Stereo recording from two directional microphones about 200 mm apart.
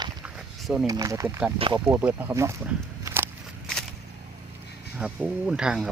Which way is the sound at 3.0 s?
10° right (ahead or behind).